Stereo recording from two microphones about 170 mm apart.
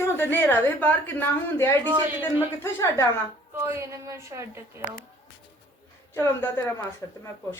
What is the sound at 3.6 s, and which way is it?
A woman's voice, 15° right (ahead or behind).